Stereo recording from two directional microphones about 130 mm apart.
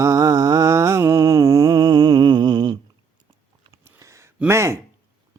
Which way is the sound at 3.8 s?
20° right (ahead or behind).